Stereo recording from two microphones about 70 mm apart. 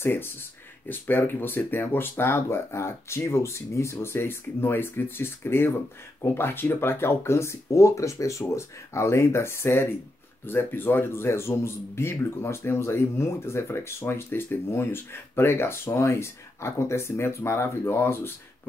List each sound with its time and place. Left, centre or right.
0.0 s a man's voice: left